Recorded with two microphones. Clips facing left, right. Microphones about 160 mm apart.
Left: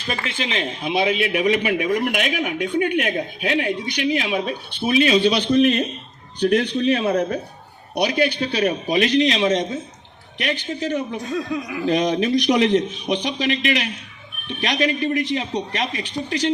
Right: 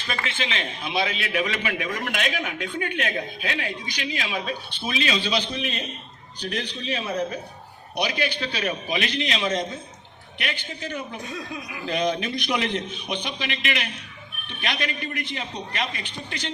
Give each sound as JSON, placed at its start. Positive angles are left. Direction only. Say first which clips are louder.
{"t": 0.1, "sound": "a man's voice", "louder": "left 4 dB", "side_deg": 35}
{"t": 0.9, "sound": "a man's voice", "louder": "left 7 dB", "side_deg": 20}
{"t": 5.0, "sound": "a man's voice", "louder": "left 6 dB", "side_deg": 55}
{"t": 8.6, "sound": "a man's voice", "louder": "left 8 dB", "side_deg": 35}
{"t": 11.9, "sound": "a man's voice", "louder": "left 6 dB", "side_deg": 35}